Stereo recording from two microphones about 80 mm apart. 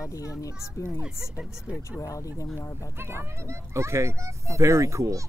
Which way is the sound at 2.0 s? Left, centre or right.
Left.